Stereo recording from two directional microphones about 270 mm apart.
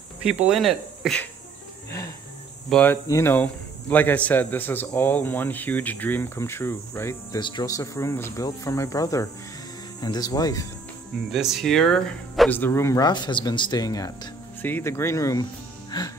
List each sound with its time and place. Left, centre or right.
0.2 s insect: centre
2.7 s speech: centre
11.3 s speech: centre